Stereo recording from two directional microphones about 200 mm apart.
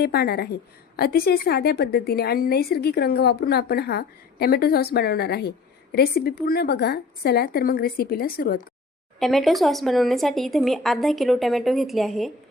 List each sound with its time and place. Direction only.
0.0 s a woman's voice: 50° left (ahead or behind)
9.1 s speech: centre (ahead or behind)